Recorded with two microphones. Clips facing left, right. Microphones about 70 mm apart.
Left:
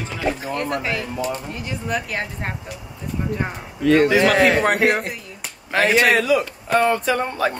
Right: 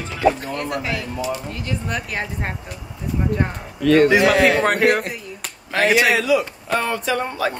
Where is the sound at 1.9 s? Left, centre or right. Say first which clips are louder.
Left 1 dB; centre.